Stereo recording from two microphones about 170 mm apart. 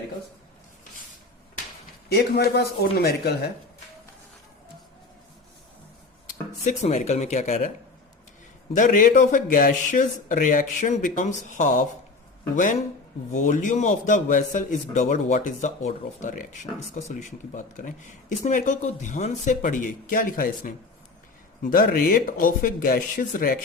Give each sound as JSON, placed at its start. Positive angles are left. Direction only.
{"t": 2.0, "sound": "a man's voice", "side_deg": 70}
{"t": 6.7, "sound": "a man's voice", "side_deg": 40}
{"t": 8.7, "sound": "a man's voice", "side_deg": 50}
{"t": 13.3, "sound": "a man's voice", "side_deg": 45}